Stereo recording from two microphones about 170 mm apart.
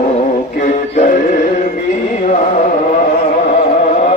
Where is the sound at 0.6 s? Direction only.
45° left (ahead or behind).